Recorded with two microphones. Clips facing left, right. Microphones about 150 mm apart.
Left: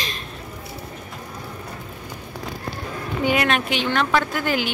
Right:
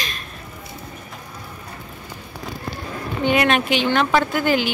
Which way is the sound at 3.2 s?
5° left (ahead or behind).